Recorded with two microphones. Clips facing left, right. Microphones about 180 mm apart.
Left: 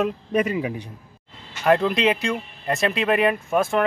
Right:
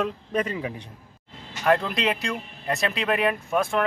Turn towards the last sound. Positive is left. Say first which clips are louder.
# left 3 dB
turn(degrees=0)  # may be behind; listen again after turning